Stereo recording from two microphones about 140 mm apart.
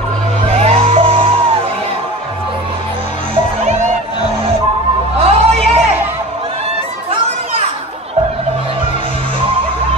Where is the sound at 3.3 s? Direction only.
50° right (ahead or behind).